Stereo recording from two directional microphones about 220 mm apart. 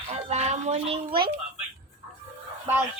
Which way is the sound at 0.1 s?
30° right (ahead or behind).